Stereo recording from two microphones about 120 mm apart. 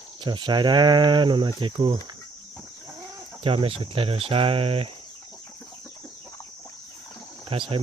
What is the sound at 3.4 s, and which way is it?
Speech, 50° right (ahead or behind).